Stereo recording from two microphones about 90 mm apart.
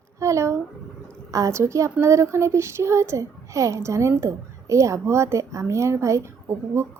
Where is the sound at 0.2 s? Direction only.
35° right (ahead or behind).